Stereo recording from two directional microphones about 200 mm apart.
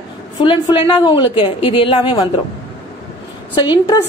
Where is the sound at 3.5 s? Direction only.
25° left (ahead or behind).